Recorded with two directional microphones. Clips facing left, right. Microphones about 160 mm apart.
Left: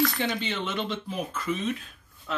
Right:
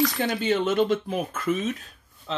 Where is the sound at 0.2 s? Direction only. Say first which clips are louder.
Right 6 dB; 45° right (ahead or behind).